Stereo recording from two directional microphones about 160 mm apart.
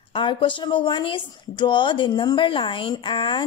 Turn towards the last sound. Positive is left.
turn(degrees=30)  # may be behind; listen again after turning